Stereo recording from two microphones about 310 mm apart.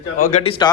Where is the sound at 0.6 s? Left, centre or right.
Centre.